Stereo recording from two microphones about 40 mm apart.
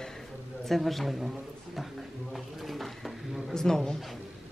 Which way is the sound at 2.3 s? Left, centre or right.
Centre.